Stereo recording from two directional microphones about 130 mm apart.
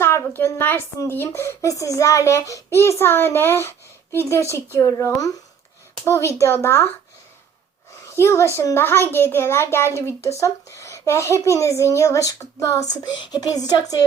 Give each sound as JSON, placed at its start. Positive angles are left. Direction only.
{"t": 0.0, "sound": "a child's voice", "side_deg": 20}
{"t": 8.0, "sound": "a child's voice", "side_deg": 20}